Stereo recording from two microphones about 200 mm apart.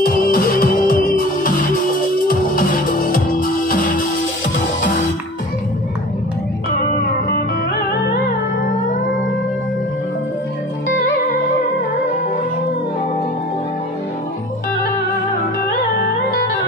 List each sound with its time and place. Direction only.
0.0 s music: 45° left (ahead or behind)